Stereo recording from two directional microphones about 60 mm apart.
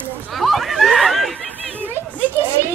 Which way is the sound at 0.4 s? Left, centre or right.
Centre.